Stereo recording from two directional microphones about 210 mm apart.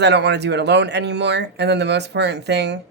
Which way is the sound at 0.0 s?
55° right (ahead or behind).